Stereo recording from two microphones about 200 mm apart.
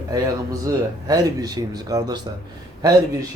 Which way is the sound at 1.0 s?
20° right (ahead or behind).